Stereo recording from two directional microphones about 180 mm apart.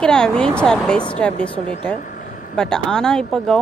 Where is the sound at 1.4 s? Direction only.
30° right (ahead or behind).